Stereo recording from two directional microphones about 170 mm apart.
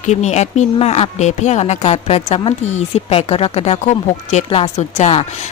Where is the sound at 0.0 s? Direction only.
40° left (ahead or behind).